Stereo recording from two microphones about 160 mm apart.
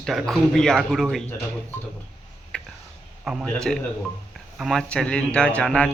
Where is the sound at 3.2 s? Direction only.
Centre (ahead or behind).